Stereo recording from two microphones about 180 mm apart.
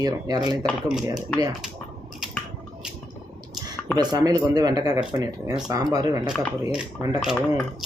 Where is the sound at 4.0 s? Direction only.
20° right (ahead or behind).